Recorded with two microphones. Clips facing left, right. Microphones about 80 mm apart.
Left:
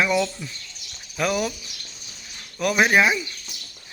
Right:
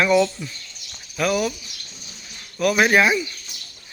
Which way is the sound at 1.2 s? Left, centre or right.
Left.